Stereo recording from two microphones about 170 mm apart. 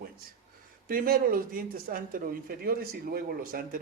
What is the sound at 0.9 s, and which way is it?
Speech, 60° right (ahead or behind).